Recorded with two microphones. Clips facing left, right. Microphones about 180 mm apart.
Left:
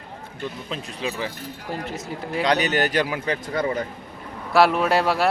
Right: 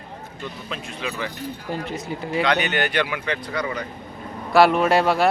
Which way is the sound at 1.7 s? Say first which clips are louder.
Right 1 dB; centre (ahead or behind).